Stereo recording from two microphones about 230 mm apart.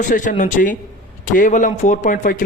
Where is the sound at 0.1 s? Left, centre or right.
Left.